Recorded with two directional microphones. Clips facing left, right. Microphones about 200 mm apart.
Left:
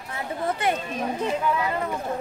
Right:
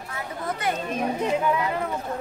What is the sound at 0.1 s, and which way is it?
Chatter, 25° left (ahead or behind).